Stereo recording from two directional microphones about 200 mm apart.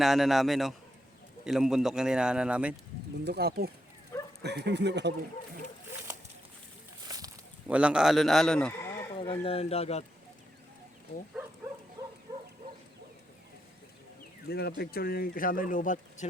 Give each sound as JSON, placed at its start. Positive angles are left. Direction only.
{"t": 0.0, "sound": "speech", "side_deg": 0}
{"t": 3.2, "sound": "speech", "side_deg": -55}
{"t": 4.1, "sound": "dog", "side_deg": 15}
{"t": 4.4, "sound": "speech", "side_deg": -60}
{"t": 7.7, "sound": "speech", "side_deg": -5}
{"t": 9.1, "sound": "speech", "side_deg": 25}
{"t": 14.4, "sound": "speech", "side_deg": 55}